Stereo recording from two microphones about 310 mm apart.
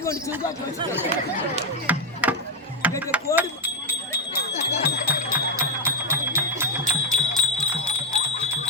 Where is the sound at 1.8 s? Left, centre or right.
Centre.